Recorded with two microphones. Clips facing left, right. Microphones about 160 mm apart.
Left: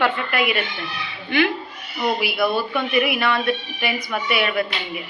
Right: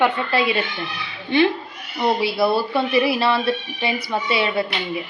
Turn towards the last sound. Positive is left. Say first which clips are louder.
# right 1 dB
turn(degrees=-25)  # may be behind; listen again after turning